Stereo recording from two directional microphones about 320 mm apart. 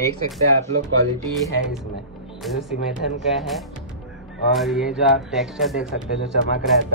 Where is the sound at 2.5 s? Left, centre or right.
Centre.